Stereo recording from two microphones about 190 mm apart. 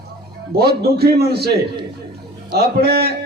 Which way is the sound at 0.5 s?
55° right (ahead or behind).